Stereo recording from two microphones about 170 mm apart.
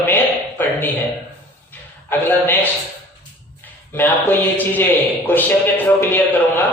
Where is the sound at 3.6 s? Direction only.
10° left (ahead or behind).